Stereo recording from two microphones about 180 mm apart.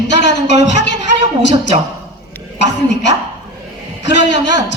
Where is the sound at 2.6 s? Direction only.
75° left (ahead or behind).